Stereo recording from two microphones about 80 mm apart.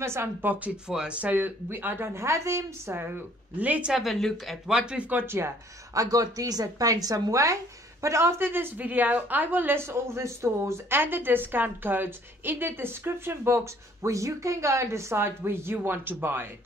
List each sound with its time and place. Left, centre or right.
0.0 s a woman's voice: right
0.8 s a woman's voice: centre
3.9 s speech: centre
4.7 s speech: centre
5.2 s speech: right
5.9 s a woman's voice: right